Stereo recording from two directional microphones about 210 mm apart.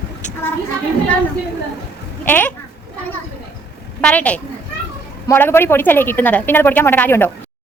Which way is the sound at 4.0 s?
5° left (ahead or behind).